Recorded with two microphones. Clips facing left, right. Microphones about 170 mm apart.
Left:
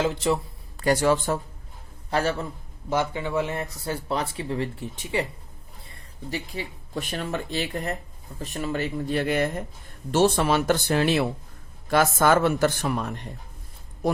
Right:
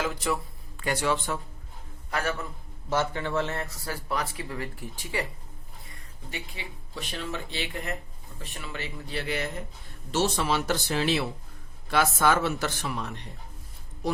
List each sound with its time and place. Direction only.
0.0 s speech: 25° left (ahead or behind)
0.8 s a man's voice: 40° left (ahead or behind)
2.0 s speech: 30° left (ahead or behind)
2.9 s speech: 15° left (ahead or behind)
3.8 s speech: 25° left (ahead or behind)
5.9 s speech: 35° left (ahead or behind)